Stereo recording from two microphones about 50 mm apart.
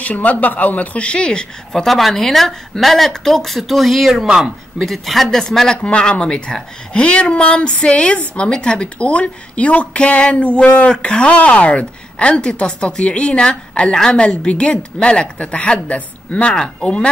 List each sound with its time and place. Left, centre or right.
0.0 s speech: left
1.7 s a woman's voice: centre
4.7 s a woman's voice: centre
5.8 s speech: centre